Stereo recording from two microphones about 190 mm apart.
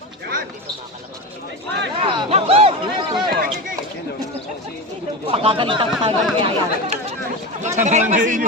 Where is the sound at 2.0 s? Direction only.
30° right (ahead or behind).